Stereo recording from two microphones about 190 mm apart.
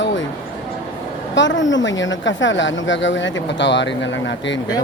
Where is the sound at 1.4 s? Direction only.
75° left (ahead or behind).